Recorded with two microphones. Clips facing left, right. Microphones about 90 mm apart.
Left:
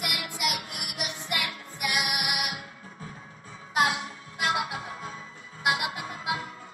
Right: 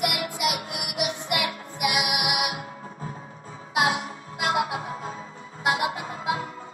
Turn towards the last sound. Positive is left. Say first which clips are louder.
# right 4 dB
turn(degrees=-30)  # may be behind; listen again after turning